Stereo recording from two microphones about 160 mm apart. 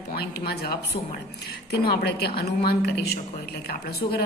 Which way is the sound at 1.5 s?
75° left (ahead or behind).